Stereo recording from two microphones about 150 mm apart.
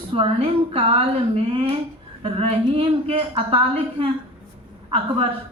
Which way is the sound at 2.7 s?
40° right (ahead or behind).